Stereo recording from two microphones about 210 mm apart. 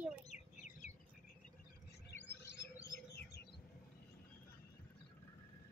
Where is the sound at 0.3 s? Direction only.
35° left (ahead or behind).